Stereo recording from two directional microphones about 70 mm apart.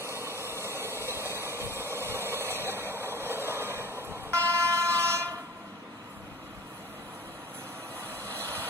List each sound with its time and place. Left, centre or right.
0.5 s engine: right
1.3 s vehicle: right
2.0 s a sound: right
8.2 s vehicle: left